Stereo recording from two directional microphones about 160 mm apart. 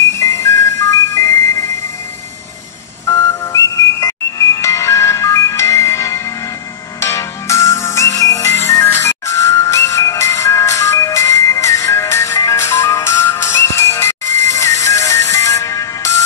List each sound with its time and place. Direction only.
0.2 s music: 15° left (ahead or behind)
3.1 s ringtone: 20° left (ahead or behind)
7.0 s music: 20° left (ahead or behind)